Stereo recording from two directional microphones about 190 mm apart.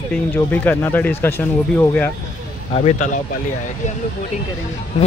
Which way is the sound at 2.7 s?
35° left (ahead or behind).